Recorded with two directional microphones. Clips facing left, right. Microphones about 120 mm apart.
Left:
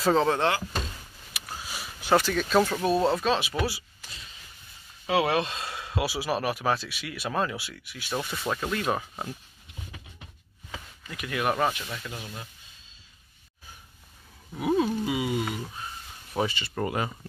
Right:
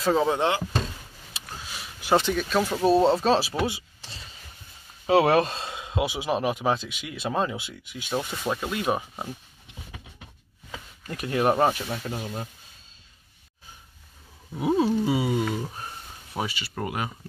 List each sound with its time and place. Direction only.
0.0 s speech: 5° right (ahead or behind)
1.3 s a sound: 25° right (ahead or behind)
1.7 s a sound: centre (ahead or behind)
2.3 s speech: 10° right (ahead or behind)
2.8 s speech: 25° right (ahead or behind)
3.6 s power windows: 25° right (ahead or behind)
5.0 s speech: 40° right (ahead or behind)
5.6 s speech: 20° right (ahead or behind)
11.1 s speech: 35° right (ahead or behind)
14.6 s speech: 30° right (ahead or behind)
16.3 s speech: 10° right (ahead or behind)